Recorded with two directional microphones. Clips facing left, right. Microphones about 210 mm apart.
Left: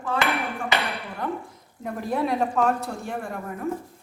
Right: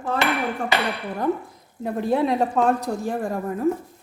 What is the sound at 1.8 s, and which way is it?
A woman's voice, 30° right (ahead or behind).